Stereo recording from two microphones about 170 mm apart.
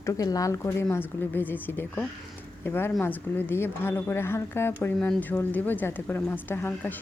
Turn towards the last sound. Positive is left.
turn(degrees=10)  # may be behind; listen again after turning